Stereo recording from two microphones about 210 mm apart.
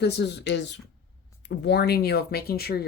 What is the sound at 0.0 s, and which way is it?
Speech, 55° left (ahead or behind).